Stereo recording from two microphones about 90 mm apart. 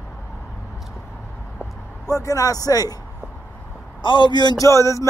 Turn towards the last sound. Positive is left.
turn(degrees=35)  # may be behind; listen again after turning